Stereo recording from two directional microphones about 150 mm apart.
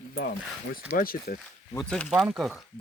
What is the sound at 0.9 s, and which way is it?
Speech, 75° left (ahead or behind).